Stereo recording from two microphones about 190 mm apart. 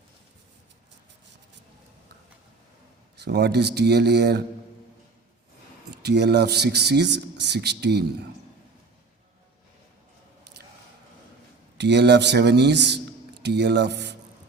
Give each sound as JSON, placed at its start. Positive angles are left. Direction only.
{"t": 3.2, "sound": "speech", "side_deg": -60}
{"t": 6.0, "sound": "speech", "side_deg": -60}
{"t": 11.8, "sound": "speech", "side_deg": -65}